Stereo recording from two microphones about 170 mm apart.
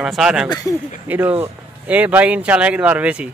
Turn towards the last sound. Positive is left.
turn(degrees=-10)  # may be behind; listen again after turning